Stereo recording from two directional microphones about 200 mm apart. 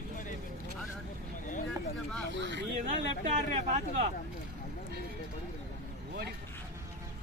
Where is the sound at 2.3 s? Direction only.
60° right (ahead or behind).